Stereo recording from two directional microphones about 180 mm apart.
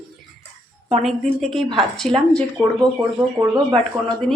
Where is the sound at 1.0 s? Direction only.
Centre (ahead or behind).